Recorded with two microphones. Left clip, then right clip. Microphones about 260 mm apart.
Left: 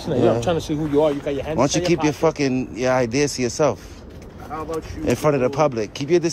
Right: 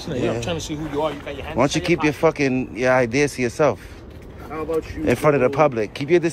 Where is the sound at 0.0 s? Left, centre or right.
Centre.